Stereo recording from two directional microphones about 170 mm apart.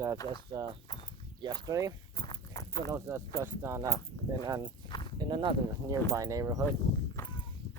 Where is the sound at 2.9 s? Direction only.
15° right (ahead or behind).